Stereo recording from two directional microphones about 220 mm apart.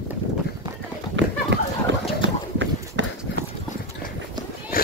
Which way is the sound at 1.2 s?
55° right (ahead or behind).